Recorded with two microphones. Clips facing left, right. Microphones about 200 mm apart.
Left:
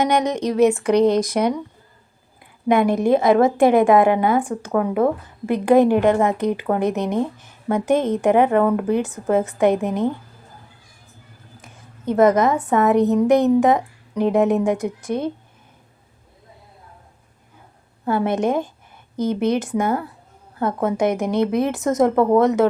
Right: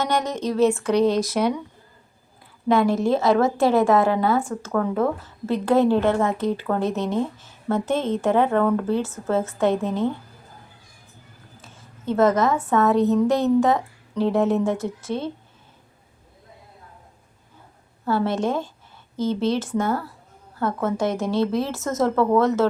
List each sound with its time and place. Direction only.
0.0 s a woman's voice: 15° left (ahead or behind)
11.6 s a woman's voice: 15° left (ahead or behind)
18.0 s a woman's voice: 15° left (ahead or behind)